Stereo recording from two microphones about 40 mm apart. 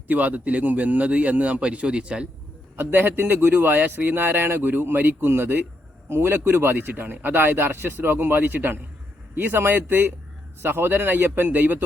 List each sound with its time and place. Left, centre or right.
0.1 s a man's voice: right
2.7 s a man's voice: right
5.2 s a man's voice: right
6.1 s a man's voice: right